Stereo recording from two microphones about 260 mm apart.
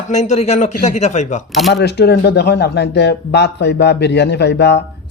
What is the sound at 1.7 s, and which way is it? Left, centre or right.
Speech, left.